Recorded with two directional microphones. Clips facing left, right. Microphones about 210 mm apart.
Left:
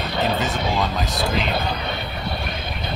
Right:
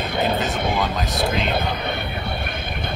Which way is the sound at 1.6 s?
55° right (ahead or behind).